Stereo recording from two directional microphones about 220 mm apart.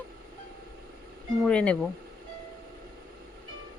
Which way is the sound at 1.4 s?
5° left (ahead or behind).